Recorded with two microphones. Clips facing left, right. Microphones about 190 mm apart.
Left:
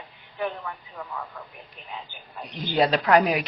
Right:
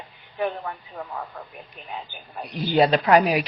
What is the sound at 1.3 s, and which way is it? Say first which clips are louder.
Speech: right 3 dB; 45° right (ahead or behind).